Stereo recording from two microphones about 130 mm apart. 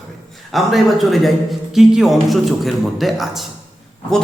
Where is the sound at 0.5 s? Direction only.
Centre (ahead or behind).